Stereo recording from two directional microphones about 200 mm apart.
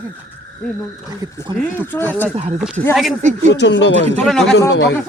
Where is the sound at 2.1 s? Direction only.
10° left (ahead or behind).